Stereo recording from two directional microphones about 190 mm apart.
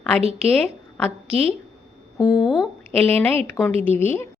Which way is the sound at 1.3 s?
30° right (ahead or behind).